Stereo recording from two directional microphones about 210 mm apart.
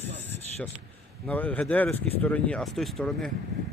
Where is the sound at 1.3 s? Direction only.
5° left (ahead or behind).